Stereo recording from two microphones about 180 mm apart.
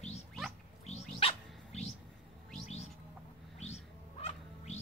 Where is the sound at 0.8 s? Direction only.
35° left (ahead or behind).